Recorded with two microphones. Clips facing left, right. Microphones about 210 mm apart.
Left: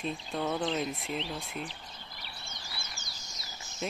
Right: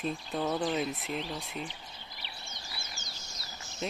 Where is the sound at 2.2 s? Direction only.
40° left (ahead or behind).